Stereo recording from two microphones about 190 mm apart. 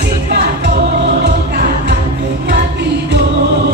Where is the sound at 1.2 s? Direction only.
60° right (ahead or behind).